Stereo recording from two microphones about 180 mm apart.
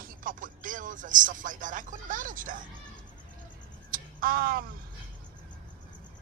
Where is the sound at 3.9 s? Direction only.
55° right (ahead or behind).